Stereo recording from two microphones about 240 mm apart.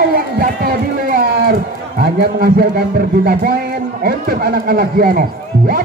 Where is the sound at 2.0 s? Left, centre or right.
Right.